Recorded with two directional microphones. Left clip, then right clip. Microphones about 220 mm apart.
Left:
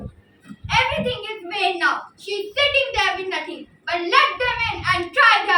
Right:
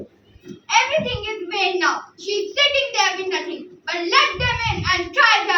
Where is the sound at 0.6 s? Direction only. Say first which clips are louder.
Right 2 dB; centre (ahead or behind).